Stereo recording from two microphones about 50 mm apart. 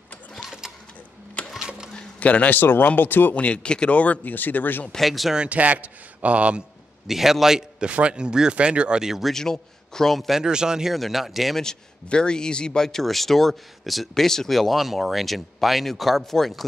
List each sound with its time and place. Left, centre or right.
1.6 s a sound: centre
2.1 s a man's voice: left
2.5 s speech: left
3.3 s speech: left
5.0 s speech: centre
5.5 s speech: right
7.1 s a man's voice: centre
7.9 s speech: centre
9.3 s a man's voice: centre
10.4 s a man's voice: centre
11.6 s speech: centre